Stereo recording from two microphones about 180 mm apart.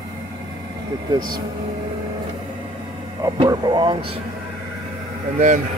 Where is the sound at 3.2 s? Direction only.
20° right (ahead or behind).